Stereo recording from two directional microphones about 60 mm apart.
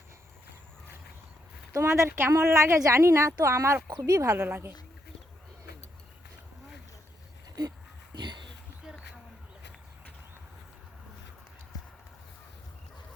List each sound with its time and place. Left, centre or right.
1.7 s speech: right
2.0 s a woman's voice: right
2.3 s speech: right
3.8 s speech: right
4.4 s a woman's voice: right